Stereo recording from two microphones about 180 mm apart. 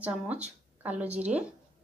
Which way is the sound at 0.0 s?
10° right (ahead or behind).